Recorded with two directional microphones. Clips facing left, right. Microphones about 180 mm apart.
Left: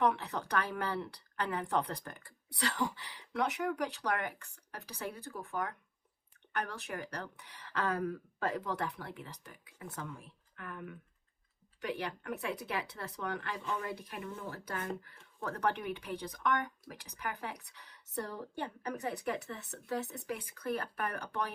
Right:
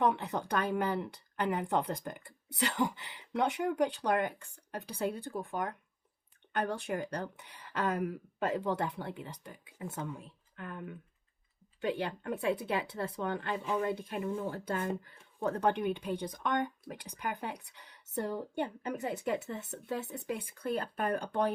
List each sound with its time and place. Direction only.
0.0 s speech: 25° right (ahead or behind)